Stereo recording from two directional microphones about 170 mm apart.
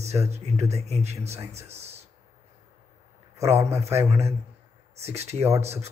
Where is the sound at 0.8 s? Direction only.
40° right (ahead or behind).